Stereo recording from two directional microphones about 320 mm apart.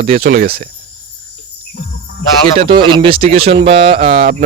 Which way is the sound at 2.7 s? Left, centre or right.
Centre.